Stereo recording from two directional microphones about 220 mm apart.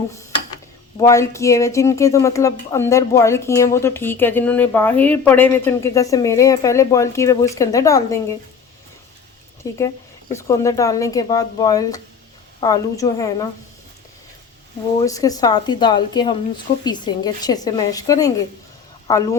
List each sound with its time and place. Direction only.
0.9 s speech: 15° left (ahead or behind)
9.6 s speech: 15° left (ahead or behind)
15.0 s speech: 15° left (ahead or behind)